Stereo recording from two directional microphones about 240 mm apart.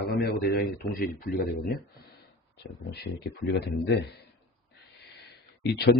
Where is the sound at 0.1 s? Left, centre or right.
Left.